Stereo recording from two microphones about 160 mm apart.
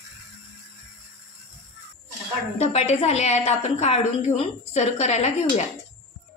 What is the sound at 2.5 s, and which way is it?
A woman's voice, 45° left (ahead or behind).